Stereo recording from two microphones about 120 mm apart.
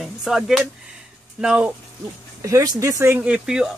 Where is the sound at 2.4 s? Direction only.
25° right (ahead or behind); by 3.7 s 10° right (ahead or behind).